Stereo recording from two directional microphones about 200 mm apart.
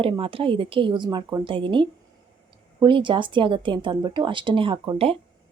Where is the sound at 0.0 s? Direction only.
25° right (ahead or behind).